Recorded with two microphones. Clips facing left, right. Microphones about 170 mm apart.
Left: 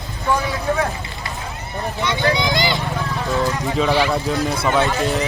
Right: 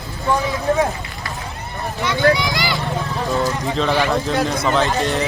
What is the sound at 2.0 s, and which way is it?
Vehicle, 20° left (ahead or behind).